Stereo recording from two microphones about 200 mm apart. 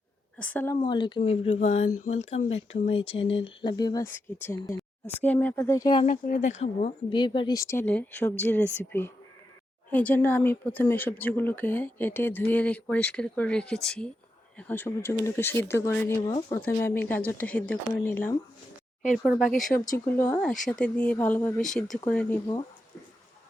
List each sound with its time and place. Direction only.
0.3 s a woman's voice: 5° left (ahead or behind)
0.8 s a woman's voice: 25° left (ahead or behind)
6.0 s a woman's voice: 40° left (ahead or behind); by 16.2 s 15° left (ahead or behind)
16.2 s speech: 25° left (ahead or behind)
16.6 s a woman's voice: 10° left (ahead or behind)
19.6 s speech: 40° left (ahead or behind)
20.1 s a woman's voice: 10° left (ahead or behind)